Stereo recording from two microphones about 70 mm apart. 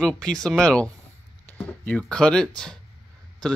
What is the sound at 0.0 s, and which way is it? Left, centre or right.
Speech, centre.